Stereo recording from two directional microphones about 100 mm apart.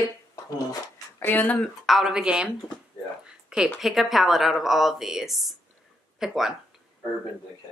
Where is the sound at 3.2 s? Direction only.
5° right (ahead or behind).